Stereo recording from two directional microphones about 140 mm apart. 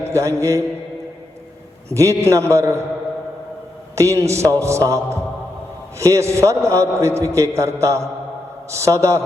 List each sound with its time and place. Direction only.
0.0 s a man's voice: 20° right (ahead or behind)
1.9 s a man's voice: 20° right (ahead or behind)
3.9 s a man's voice: 20° right (ahead or behind)